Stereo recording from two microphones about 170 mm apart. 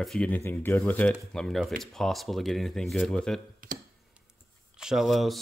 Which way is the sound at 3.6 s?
55° right (ahead or behind).